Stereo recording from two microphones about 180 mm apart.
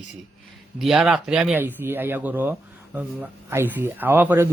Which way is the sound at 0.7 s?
Centre (ahead or behind).